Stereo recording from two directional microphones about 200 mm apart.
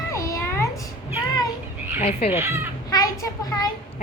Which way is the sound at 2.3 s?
10° right (ahead or behind).